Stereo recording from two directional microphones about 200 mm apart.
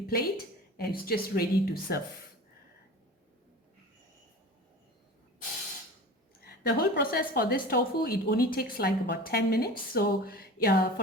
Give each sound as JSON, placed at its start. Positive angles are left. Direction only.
{"t": 0.1, "sound": "a woman's voice", "side_deg": 50}
{"t": 6.4, "sound": "a woman's voice", "side_deg": 50}